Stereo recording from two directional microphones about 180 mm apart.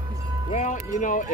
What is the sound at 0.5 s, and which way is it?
Speech, 45° left (ahead or behind).